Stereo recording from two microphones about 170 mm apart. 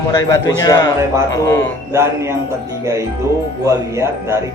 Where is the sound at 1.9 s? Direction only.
15° right (ahead or behind).